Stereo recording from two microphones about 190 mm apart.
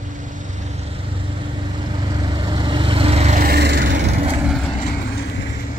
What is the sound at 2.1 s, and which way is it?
Vehicle, 25° right (ahead or behind).